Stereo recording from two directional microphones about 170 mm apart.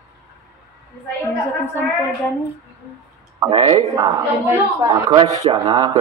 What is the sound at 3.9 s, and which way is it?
A woman's voice, 20° right (ahead or behind).